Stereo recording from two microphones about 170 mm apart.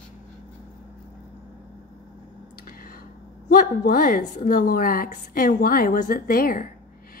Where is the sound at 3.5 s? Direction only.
55° left (ahead or behind).